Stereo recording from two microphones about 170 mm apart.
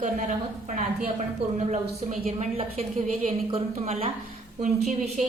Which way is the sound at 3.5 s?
35° right (ahead or behind).